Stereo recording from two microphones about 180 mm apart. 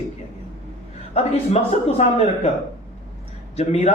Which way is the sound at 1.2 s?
35° left (ahead or behind).